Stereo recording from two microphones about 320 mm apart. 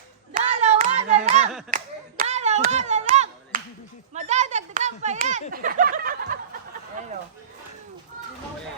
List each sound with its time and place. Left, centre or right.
0.3 s hands: right
1.7 s clapping: right
4.1 s a sound: right